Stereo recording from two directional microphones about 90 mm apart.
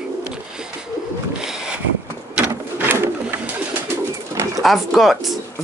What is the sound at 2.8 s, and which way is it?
Bird, 25° right (ahead or behind).